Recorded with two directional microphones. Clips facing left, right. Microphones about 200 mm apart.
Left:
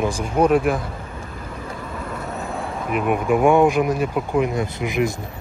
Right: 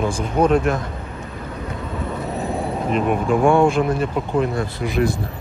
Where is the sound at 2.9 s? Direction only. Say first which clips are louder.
Even; 10° left (ahead or behind).